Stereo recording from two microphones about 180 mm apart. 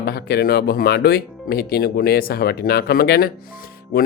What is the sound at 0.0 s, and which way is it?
Speech, 60° left (ahead or behind).